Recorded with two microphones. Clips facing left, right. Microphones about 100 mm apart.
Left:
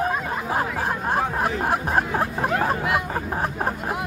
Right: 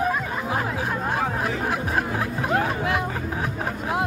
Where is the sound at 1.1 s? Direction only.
45° left (ahead or behind).